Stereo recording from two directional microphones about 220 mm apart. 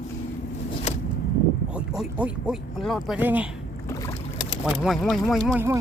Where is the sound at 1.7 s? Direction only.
5° right (ahead or behind).